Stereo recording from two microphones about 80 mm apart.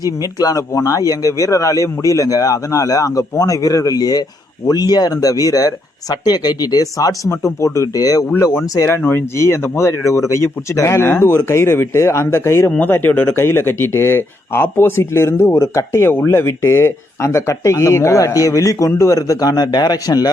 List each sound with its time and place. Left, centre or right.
0.0 s speech: left
9.0 s speech: left